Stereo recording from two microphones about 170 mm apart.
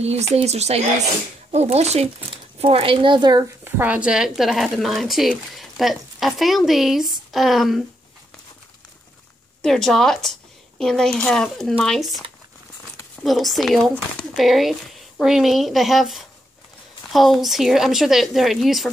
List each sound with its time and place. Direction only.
0.0 s speech: 40° right (ahead or behind)
3.6 s a woman's voice: 10° right (ahead or behind)
9.6 s a woman's voice: 5° left (ahead or behind)
13.2 s a woman's voice: centre (ahead or behind)